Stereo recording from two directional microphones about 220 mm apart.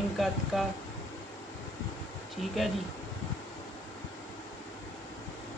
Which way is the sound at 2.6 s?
Centre (ahead or behind).